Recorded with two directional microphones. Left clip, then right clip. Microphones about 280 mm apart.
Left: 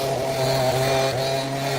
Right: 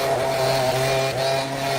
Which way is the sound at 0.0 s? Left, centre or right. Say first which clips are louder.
Right 3 dB; right.